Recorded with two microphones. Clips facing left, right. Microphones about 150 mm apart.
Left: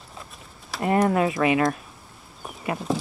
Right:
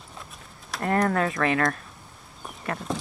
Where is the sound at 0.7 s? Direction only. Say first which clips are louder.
Left 3 dB; 5° left (ahead or behind).